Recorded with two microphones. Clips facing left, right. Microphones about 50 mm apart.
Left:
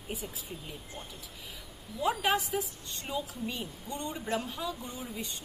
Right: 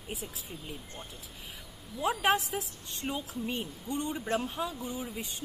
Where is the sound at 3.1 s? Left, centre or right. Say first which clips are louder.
Right 1 dB; centre.